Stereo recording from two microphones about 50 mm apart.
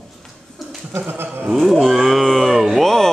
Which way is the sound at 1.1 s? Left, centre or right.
Right.